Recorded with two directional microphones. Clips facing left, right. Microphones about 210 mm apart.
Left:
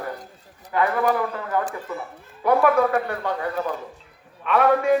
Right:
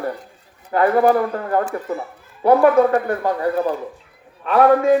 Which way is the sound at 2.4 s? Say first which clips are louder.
Right 5 dB; 30° right (ahead or behind).